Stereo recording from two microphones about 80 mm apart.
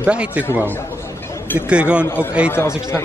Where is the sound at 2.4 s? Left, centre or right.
Left.